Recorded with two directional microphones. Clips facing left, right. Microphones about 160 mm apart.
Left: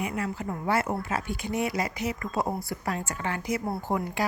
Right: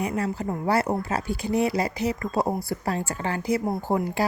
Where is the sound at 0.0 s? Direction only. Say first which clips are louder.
Right 4 dB; 35° right (ahead or behind).